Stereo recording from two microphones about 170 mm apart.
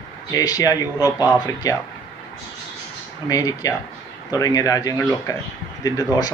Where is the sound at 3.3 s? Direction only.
20° left (ahead or behind).